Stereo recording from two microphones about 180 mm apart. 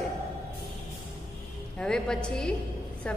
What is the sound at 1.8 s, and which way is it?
Speech, 5° left (ahead or behind).